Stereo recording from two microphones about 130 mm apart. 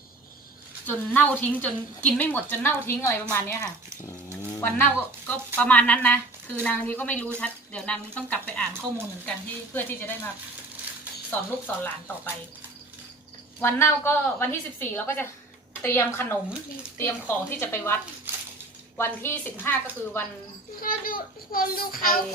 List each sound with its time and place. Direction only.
0.9 s a woman's voice: 15° left (ahead or behind)
4.3 s a sound: 15° left (ahead or behind)
5.5 s a woman's voice: 10° left (ahead or behind)
9.7 s a woman's voice: 15° left (ahead or behind)
11.3 s a woman's voice: 15° left (ahead or behind)
13.6 s a woman's voice: 20° left (ahead or behind)
18.3 s dishes: 15° right (ahead or behind)
18.9 s a woman's voice: 20° left (ahead or behind)
20.8 s a child's voice: 90° left